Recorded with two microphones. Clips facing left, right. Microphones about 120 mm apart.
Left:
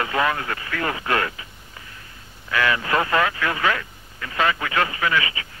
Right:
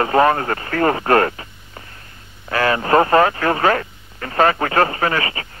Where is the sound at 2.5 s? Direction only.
40° right (ahead or behind).